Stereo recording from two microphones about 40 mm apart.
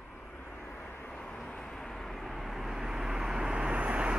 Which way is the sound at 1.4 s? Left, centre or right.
Centre.